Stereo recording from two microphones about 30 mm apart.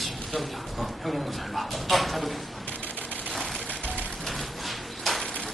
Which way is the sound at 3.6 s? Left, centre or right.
Left.